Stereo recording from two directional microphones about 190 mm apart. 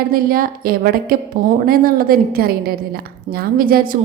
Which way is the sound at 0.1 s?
50° right (ahead or behind).